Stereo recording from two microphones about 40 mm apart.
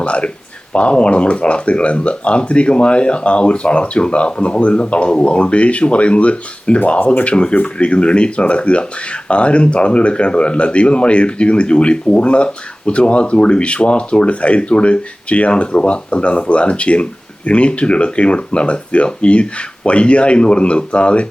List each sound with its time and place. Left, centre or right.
0.0 s a sound: left
0.7 s speech: left
7.0 s speech: left
7.3 s speech: left